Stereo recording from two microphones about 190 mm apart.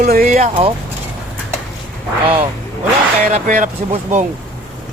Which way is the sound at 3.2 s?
45° right (ahead or behind).